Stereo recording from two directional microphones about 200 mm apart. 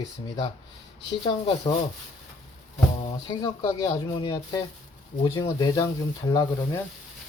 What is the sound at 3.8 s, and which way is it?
A man's voice, 20° left (ahead or behind).